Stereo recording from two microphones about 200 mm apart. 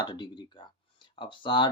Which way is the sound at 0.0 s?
20° left (ahead or behind).